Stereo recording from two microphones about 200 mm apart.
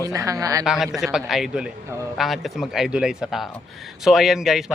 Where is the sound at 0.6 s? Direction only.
Centre (ahead or behind).